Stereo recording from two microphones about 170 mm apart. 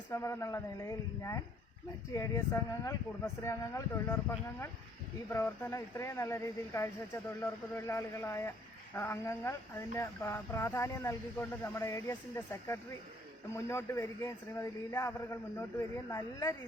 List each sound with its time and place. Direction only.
0.1 s speech: 15° left (ahead or behind)